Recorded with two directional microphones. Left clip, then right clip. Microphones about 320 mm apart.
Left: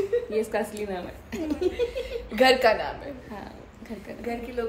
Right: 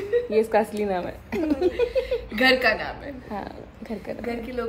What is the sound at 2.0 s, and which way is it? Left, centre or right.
Speech, centre.